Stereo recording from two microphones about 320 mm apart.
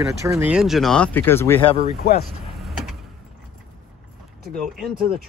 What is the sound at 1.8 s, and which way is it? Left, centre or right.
Speech, left.